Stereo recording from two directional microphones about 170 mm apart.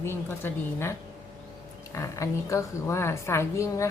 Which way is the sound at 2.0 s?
15° left (ahead or behind).